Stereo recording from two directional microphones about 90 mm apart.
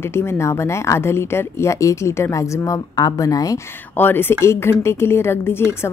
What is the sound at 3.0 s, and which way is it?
Speech, 45° left (ahead or behind).